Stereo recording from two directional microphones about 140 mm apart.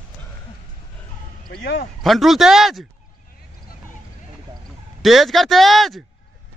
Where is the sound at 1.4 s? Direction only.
90° left.